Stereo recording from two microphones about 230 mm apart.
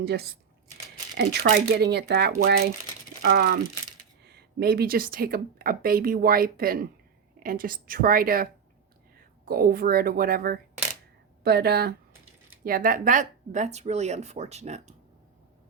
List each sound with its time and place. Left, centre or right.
0.0 s speech: right
9.5 s speech: right